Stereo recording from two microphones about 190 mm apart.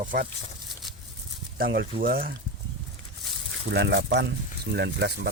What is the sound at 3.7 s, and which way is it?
Speech, 65° right (ahead or behind).